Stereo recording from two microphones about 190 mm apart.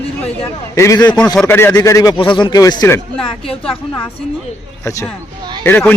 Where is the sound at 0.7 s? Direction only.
15° left (ahead or behind).